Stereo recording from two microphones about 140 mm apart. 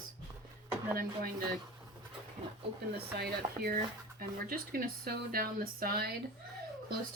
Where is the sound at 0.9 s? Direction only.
90° right.